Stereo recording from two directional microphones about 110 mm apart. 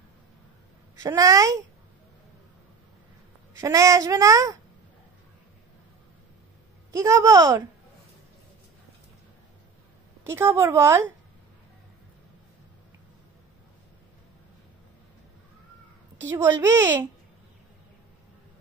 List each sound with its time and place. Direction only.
1.0 s speech: 35° right (ahead or behind)
3.5 s speech: 30° right (ahead or behind)
6.9 s speech: 30° right (ahead or behind)
10.2 s a woman's voice: 25° right (ahead or behind)
16.3 s a woman's voice: 25° right (ahead or behind)